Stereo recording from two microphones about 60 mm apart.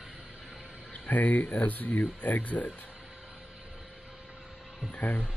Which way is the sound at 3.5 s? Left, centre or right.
Centre.